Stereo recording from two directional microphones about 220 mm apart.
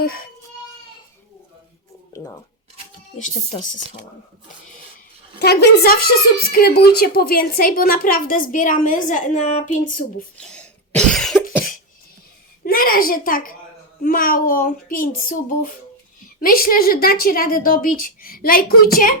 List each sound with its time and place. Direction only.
5.4 s a woman's voice: 45° left (ahead or behind); by 9.7 s 30° left (ahead or behind)
10.3 s cough: 5° left (ahead or behind)
12.6 s a child's voice: 40° left (ahead or behind)